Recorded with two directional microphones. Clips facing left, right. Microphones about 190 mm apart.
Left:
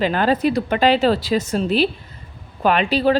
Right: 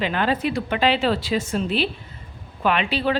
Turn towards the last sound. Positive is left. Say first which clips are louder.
# left 5 dB
turn(degrees=40)  # may be behind; listen again after turning